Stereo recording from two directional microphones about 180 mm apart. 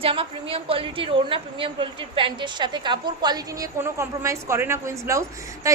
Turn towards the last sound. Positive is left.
turn(degrees=-15)  # may be behind; listen again after turning